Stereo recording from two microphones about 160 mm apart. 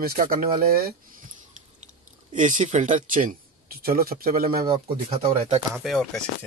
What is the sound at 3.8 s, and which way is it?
Speech, 65° right (ahead or behind).